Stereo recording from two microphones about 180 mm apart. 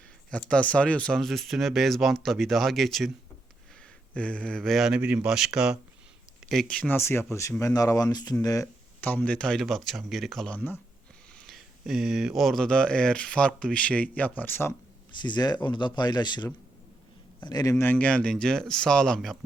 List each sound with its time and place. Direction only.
0.3 s speech: 5° left (ahead or behind)
4.1 s speech: 5° left (ahead or behind)
15.1 s speech: 25° left (ahead or behind); by 19.4 s centre (ahead or behind)